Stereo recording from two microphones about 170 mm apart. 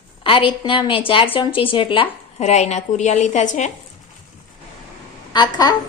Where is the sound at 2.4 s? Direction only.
40° left (ahead or behind).